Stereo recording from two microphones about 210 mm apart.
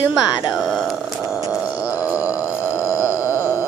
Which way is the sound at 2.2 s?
15° left (ahead or behind).